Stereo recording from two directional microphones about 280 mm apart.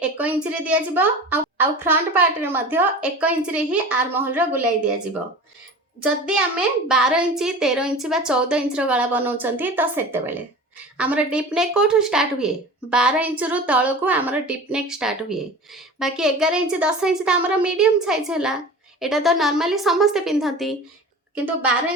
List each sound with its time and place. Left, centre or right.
0.0 s a woman's voice: centre
6.2 s a woman's voice: centre